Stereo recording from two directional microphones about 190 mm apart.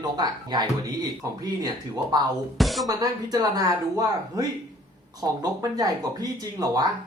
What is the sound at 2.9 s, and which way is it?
Speech, 20° right (ahead or behind).